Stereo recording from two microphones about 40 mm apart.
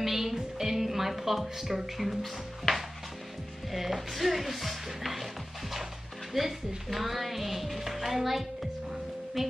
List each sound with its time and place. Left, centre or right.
0.0 s music: centre
3.7 s speech: centre